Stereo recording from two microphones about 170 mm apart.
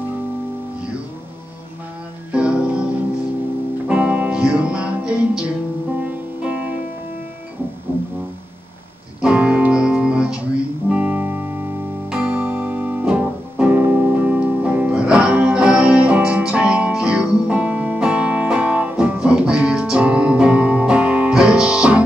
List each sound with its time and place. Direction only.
2.3 s music: 5° right (ahead or behind)
9.2 s music: 5° right (ahead or behind)